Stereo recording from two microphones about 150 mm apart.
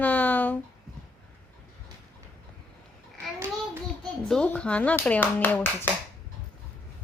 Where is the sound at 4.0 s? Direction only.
5° left (ahead or behind).